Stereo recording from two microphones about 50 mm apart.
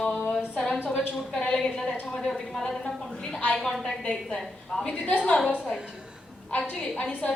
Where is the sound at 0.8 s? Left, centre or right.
Left.